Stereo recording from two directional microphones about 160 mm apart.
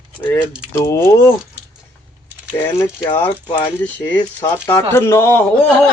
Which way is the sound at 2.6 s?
15° left (ahead or behind).